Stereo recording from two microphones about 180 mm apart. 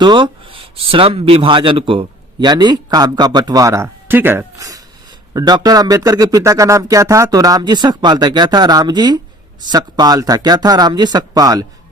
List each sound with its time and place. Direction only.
0.0 s speech: 25° right (ahead or behind)